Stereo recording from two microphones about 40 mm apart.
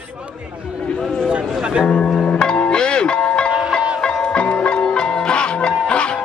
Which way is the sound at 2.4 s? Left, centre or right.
Left.